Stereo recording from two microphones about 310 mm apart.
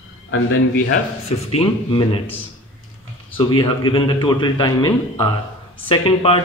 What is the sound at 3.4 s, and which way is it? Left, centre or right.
A man's voice, centre.